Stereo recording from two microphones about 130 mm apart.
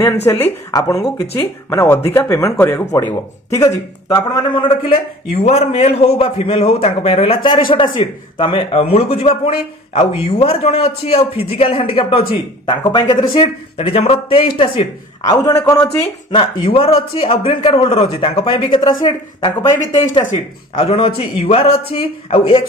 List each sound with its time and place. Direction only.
0.0 s a man's voice: 15° left (ahead or behind); by 4.6 s 35° left (ahead or behind)
5.3 s a man's voice: 55° left (ahead or behind)
12.6 s speech: 30° left (ahead or behind)
13.7 s a man's voice: 50° left (ahead or behind)
15.4 s a man's voice: 30° left (ahead or behind); by 22.6 s 45° left (ahead or behind)